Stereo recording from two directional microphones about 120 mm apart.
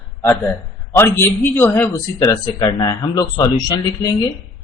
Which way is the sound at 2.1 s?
35° left (ahead or behind).